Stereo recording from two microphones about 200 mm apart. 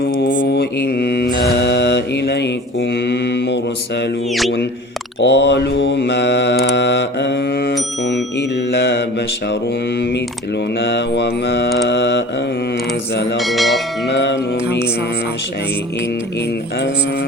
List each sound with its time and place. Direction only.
0.3 s mantra: 55° left (ahead or behind)
5.2 s mantra: 60° left (ahead or behind)
10.8 s mantra: 60° left (ahead or behind)
13.3 s bell: centre (ahead or behind)
14.1 s music: 60° left (ahead or behind)